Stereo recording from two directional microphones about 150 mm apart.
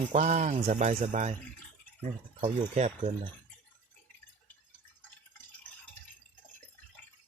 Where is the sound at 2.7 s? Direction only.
45° right (ahead or behind).